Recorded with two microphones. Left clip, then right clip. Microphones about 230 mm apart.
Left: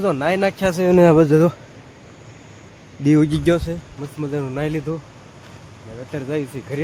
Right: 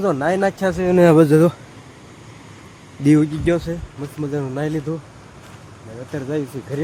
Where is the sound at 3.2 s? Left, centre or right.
Centre.